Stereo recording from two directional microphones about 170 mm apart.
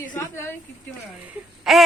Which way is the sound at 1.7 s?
Centre (ahead or behind).